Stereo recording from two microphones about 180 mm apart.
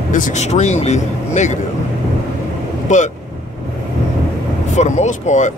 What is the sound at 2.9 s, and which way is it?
Speech, 45° left (ahead or behind).